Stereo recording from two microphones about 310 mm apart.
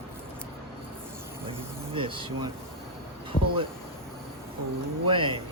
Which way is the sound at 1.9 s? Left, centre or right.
Centre.